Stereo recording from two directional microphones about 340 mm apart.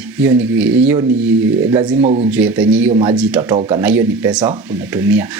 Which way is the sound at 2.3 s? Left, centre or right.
Centre.